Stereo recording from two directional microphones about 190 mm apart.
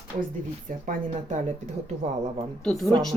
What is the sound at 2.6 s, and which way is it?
Speech, centre (ahead or behind).